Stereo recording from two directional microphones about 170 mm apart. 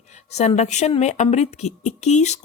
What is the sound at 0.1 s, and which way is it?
A woman's voice, 40° left (ahead or behind).